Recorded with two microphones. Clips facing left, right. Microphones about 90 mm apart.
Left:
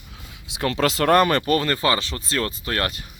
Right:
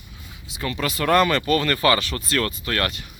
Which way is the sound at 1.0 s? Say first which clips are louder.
Even; 40° left (ahead or behind).